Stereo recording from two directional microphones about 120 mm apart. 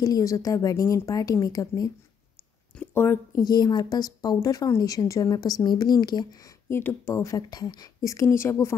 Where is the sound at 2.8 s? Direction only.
20° left (ahead or behind).